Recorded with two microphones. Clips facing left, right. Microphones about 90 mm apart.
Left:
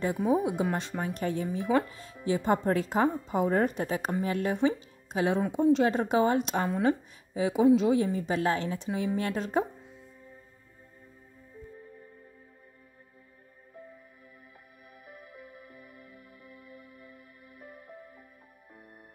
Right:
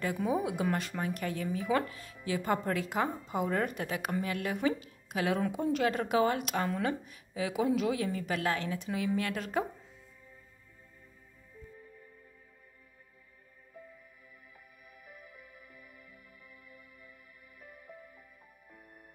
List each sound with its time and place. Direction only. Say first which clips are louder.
0.0 s speech: left 5 dB; 25° left (ahead or behind)
15.4 s music: left 6 dB; 50° left (ahead or behind)